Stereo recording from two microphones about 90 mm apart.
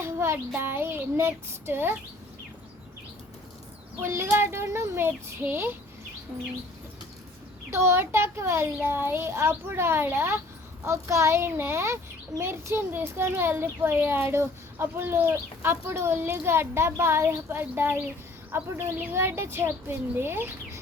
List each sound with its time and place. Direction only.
0.0 s a child's voice: 30° right (ahead or behind)
4.0 s a child's voice: 30° right (ahead or behind)
7.7 s a child's voice: 30° right (ahead or behind)